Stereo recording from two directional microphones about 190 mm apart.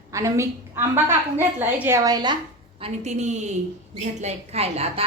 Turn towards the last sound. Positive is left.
turn(degrees=-35)  # may be behind; listen again after turning